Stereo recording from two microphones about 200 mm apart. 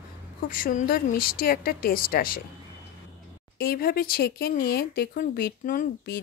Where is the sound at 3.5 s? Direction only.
50° left (ahead or behind).